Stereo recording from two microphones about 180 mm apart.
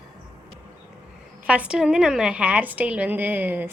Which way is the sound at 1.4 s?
5° right (ahead or behind).